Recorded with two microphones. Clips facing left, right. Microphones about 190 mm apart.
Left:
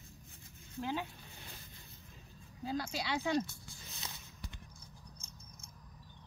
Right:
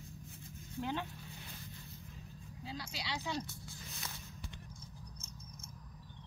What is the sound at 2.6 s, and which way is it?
Speech, 50° left (ahead or behind).